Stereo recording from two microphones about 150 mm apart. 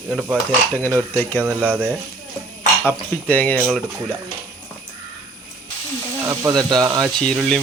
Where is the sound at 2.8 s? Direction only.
10° left (ahead or behind).